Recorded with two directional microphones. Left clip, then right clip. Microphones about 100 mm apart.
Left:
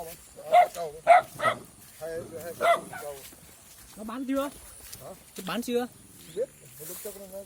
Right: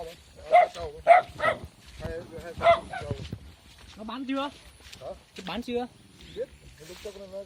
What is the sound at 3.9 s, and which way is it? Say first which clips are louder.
Speech: left 1 dB; 35° left (ahead or behind).